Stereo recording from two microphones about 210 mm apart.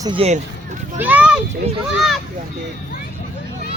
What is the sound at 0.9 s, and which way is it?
Speech, 5° right (ahead or behind).